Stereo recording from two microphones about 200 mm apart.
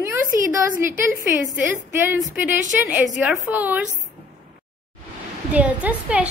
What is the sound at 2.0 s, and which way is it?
A woman's voice, 10° right (ahead or behind).